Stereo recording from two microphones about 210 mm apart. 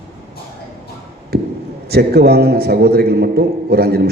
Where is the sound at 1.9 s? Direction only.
50° right (ahead or behind).